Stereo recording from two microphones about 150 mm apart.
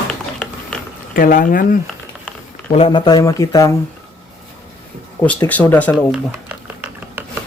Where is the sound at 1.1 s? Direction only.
70° left (ahead or behind).